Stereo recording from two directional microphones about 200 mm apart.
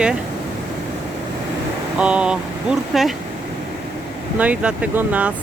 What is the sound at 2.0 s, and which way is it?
Speech, 5° right (ahead or behind).